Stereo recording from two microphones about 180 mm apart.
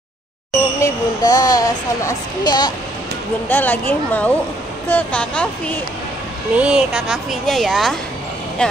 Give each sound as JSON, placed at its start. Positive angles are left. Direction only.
{"t": 0.7, "sound": "a sound", "side_deg": 20}
{"t": 3.4, "sound": "a woman's voice", "side_deg": 10}
{"t": 6.5, "sound": "a woman's voice", "side_deg": -5}